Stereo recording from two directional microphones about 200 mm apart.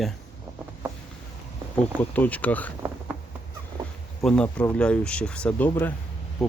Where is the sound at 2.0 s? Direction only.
10° left (ahead or behind).